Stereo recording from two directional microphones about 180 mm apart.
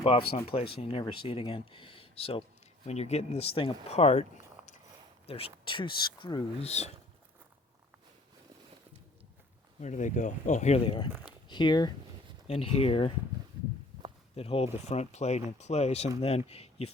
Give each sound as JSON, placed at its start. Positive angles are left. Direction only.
{"t": 0.0, "sound": "speech", "side_deg": 30}
{"t": 9.8, "sound": "speech", "side_deg": 45}
{"t": 11.1, "sound": "speech", "side_deg": -10}
{"t": 11.4, "sound": "speech", "side_deg": 25}
{"t": 14.3, "sound": "speech", "side_deg": 35}